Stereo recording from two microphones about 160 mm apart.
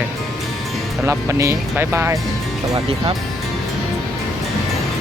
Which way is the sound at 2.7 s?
35° right (ahead or behind).